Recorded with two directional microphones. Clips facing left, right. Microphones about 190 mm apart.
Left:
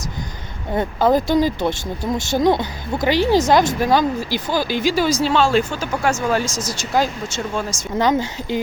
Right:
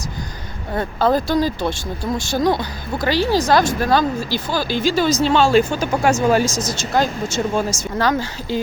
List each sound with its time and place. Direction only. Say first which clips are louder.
0.7 s speech: left 1 dB; 15° left (ahead or behind)
5.3 s speech: right 2 dB; centre (ahead or behind)
5.8 s speech: right 4 dB; 15° right (ahead or behind)
6.6 s speech: right 1 dB; 10° left (ahead or behind)
7.3 s speech: right 4 dB; 10° right (ahead or behind)
7.7 s speech: left 1 dB; 20° left (ahead or behind)